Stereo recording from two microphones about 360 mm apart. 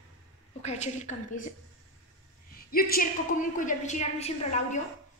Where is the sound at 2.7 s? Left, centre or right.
Left.